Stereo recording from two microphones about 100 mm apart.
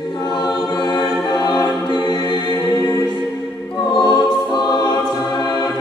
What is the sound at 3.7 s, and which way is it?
Choir, 45° left (ahead or behind).